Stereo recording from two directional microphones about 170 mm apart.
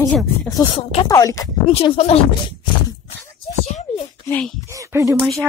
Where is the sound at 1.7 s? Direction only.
35° left (ahead or behind).